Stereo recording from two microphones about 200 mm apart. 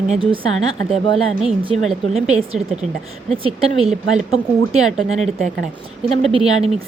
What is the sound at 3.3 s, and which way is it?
Speech, 25° right (ahead or behind).